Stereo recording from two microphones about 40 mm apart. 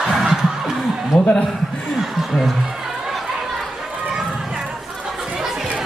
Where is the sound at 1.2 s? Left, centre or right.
Left.